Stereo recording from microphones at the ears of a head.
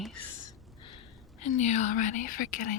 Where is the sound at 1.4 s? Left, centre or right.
Left.